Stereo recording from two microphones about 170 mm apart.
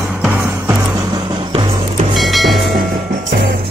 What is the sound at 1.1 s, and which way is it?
Music, 25° right (ahead or behind).